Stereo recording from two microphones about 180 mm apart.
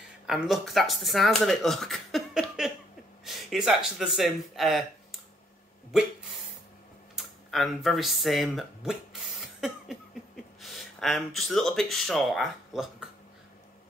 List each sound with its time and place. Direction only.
0.3 s speech: centre (ahead or behind)
7.2 s speech: centre (ahead or behind)
9.6 s a sound: centre (ahead or behind)